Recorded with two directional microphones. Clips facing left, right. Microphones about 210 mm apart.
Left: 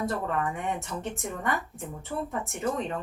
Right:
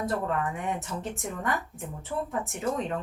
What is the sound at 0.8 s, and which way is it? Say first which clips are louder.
Speech: even; centre (ahead or behind).